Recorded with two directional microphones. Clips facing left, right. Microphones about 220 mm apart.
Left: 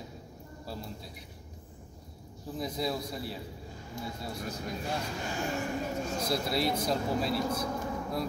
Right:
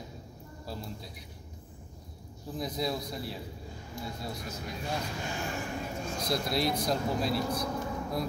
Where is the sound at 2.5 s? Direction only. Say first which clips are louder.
Even; 5° left (ahead or behind).